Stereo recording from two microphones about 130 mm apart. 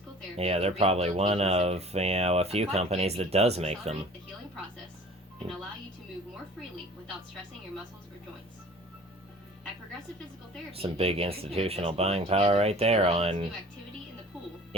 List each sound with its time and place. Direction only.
0.3 s speech: 55° right (ahead or behind)
10.7 s speech: 50° right (ahead or behind)